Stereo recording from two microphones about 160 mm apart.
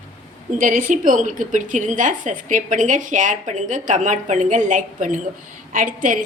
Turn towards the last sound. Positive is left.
turn(degrees=-55)  # may be behind; listen again after turning